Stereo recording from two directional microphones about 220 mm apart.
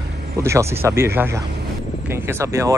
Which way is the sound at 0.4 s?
10° right (ahead or behind).